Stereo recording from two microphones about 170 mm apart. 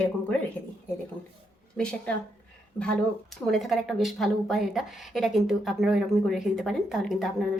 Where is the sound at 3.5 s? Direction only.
Centre (ahead or behind).